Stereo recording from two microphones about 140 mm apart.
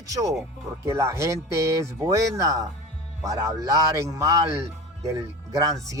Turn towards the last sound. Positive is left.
turn(degrees=-25)  # may be behind; listen again after turning